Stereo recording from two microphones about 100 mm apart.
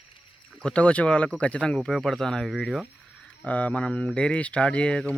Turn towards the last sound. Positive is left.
turn(degrees=10)  # may be behind; listen again after turning